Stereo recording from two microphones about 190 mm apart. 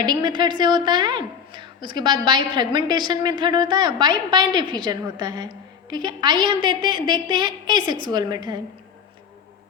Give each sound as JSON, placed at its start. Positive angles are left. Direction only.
{"t": 0.0, "sound": "a woman's voice", "side_deg": -20}